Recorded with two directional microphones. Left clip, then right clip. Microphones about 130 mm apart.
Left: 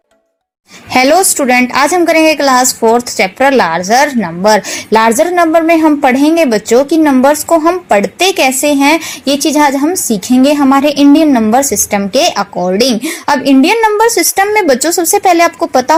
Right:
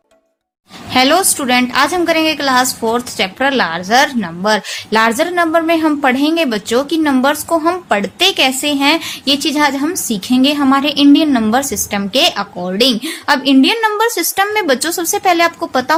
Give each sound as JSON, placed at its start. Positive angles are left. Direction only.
{"t": 0.9, "sound": "a woman's voice", "side_deg": 45}